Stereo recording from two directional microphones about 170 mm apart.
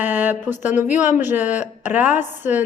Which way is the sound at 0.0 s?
10° right (ahead or behind).